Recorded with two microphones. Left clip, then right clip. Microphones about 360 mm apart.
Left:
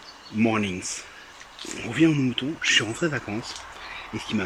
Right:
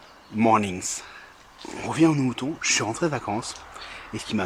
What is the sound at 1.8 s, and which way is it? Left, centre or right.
Speech, right.